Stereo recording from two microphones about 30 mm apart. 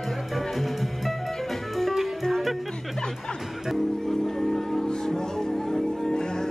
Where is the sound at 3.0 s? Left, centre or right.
Left.